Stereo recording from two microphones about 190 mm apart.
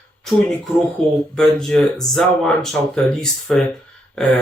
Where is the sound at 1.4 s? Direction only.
5° left (ahead or behind).